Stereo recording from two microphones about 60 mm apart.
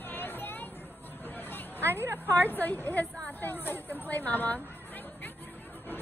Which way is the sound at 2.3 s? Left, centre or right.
Left.